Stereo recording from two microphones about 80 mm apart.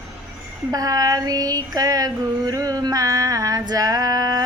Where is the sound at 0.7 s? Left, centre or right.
Right.